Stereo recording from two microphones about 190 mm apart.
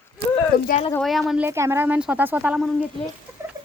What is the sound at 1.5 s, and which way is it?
A woman's voice, 15° right (ahead or behind).